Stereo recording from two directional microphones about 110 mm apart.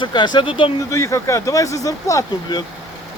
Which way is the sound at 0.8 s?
30° left (ahead or behind).